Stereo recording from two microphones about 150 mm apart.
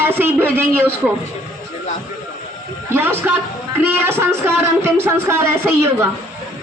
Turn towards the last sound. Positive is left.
turn(degrees=-15)  # may be behind; listen again after turning